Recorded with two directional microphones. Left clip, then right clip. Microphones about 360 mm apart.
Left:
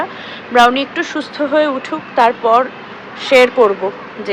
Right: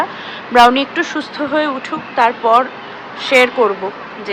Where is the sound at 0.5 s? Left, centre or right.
Centre.